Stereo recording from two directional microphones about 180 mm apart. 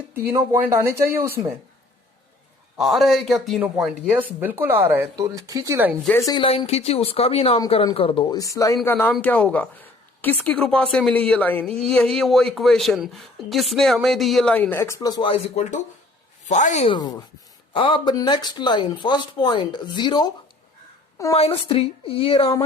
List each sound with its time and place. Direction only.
0.3 s speech: 15° right (ahead or behind)
2.7 s speech: centre (ahead or behind); by 5.9 s 15° right (ahead or behind)
6.1 s speech: 15° left (ahead or behind)
6.4 s speech: 30° left (ahead or behind)
16.9 s speech: 20° left (ahead or behind)
21.3 s speech: 30° left (ahead or behind)